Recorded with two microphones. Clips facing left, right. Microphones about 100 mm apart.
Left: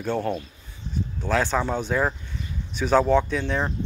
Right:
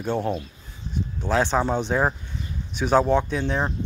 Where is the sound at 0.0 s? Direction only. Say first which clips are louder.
Right 1 dB; 10° right (ahead or behind).